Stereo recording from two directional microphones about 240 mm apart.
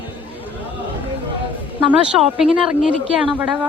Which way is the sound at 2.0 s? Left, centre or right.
Centre.